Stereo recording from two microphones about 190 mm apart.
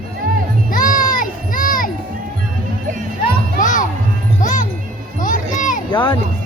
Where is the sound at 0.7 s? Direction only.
45° left (ahead or behind).